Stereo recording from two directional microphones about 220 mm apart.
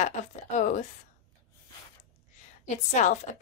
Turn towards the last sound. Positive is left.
turn(degrees=35)  # may be behind; listen again after turning